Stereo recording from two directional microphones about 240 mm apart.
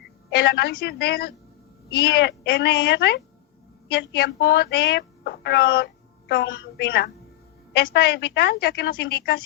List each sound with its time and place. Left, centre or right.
0.3 s a woman's voice: left